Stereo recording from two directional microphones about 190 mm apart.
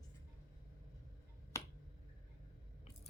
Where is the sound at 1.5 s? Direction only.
15° left (ahead or behind).